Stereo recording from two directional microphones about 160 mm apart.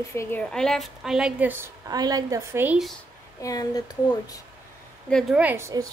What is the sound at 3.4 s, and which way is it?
Speech, 20° left (ahead or behind).